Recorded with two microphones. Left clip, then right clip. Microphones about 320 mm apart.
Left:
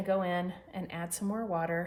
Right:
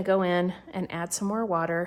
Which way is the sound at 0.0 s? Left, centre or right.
Right.